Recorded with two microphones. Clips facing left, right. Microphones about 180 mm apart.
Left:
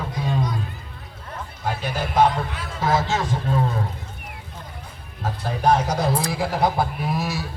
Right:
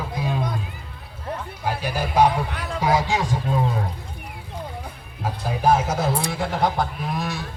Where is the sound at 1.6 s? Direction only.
10° right (ahead or behind).